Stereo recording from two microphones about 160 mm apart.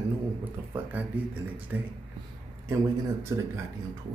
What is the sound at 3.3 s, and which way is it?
Speech, 20° right (ahead or behind).